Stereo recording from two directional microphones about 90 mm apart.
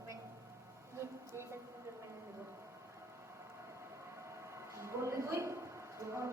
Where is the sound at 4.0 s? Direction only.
30° right (ahead or behind).